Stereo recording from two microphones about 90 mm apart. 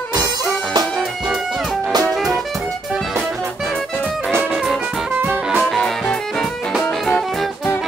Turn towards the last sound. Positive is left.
turn(degrees=5)  # may be behind; listen again after turning